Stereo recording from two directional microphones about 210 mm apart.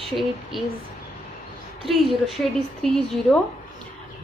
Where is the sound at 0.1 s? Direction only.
Centre (ahead or behind).